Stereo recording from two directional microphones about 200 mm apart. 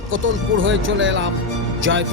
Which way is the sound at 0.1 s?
75° right (ahead or behind).